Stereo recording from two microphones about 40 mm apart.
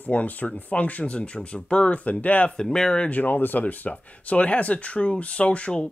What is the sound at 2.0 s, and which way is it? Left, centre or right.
Speech, left.